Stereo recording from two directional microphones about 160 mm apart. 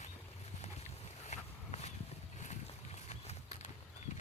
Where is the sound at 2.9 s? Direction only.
45° left (ahead or behind).